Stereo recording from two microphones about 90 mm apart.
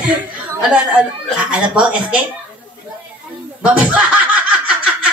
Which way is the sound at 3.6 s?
15° right (ahead or behind).